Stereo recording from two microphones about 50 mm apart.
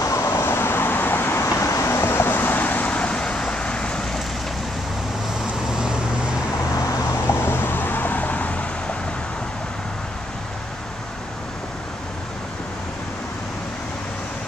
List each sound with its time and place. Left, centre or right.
0.3 s vehicle: left; by 4.0 s centre
5.7 s vehicle: centre
7.2 s vehicle: left